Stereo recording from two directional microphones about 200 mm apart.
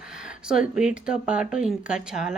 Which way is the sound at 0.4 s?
5° right (ahead or behind).